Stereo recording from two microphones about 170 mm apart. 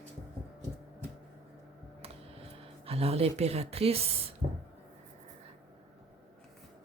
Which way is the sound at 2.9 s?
35° right (ahead or behind).